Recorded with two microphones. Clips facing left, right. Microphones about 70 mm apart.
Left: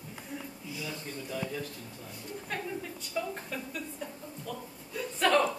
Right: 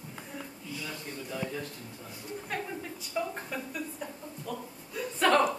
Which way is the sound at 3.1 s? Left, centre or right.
Centre.